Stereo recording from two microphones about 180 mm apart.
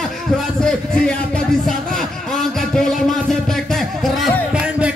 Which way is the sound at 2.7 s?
5° left (ahead or behind).